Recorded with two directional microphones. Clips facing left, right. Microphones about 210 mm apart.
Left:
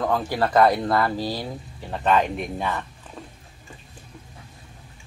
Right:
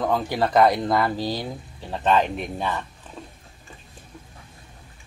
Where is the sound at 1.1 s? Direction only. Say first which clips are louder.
Even; 5° left (ahead or behind).